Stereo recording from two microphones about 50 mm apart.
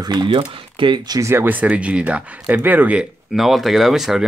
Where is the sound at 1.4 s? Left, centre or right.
Right.